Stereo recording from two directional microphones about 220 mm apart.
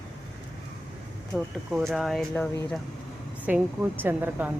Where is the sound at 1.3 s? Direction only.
Centre (ahead or behind).